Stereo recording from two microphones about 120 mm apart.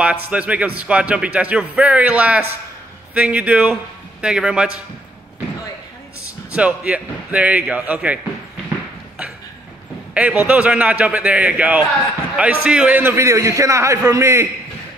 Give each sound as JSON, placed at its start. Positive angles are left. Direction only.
{"t": 0.0, "sound": "speech", "side_deg": -10}
{"t": 6.5, "sound": "speech", "side_deg": -10}
{"t": 10.1, "sound": "a man's voice", "side_deg": -10}